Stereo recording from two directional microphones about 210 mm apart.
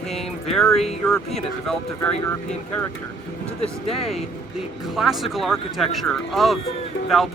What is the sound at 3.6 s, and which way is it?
Speech, 30° left (ahead or behind).